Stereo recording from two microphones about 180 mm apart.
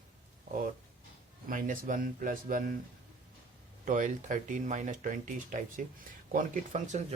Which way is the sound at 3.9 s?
45° right (ahead or behind).